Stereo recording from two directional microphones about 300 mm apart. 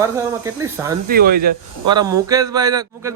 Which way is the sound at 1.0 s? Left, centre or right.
Right.